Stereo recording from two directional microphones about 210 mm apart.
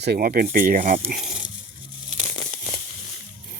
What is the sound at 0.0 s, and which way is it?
Speech, 45° right (ahead or behind).